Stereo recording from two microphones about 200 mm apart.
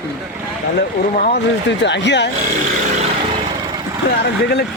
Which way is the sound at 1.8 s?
60° left (ahead or behind).